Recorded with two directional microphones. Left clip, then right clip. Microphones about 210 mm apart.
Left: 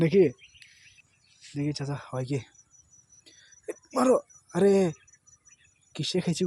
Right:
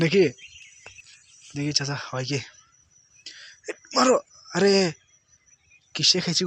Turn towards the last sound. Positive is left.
turn(degrees=15)  # may be behind; listen again after turning